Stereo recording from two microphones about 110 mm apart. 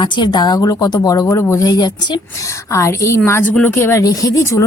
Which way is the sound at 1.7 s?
40° left (ahead or behind).